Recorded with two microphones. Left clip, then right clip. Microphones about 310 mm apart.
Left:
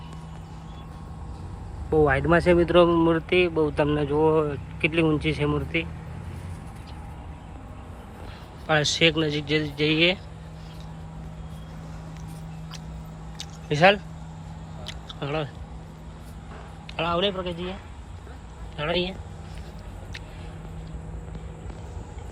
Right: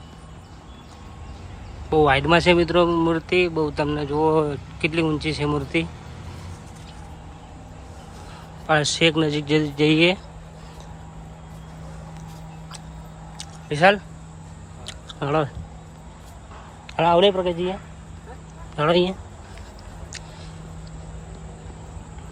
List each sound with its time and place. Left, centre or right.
1.9 s speech: centre
8.6 s speech: centre
13.7 s speech: centre
14.8 s a sound: centre
17.0 s speech: centre
18.8 s speech: right